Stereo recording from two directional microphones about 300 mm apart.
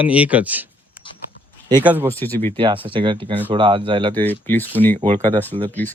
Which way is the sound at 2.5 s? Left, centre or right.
Centre.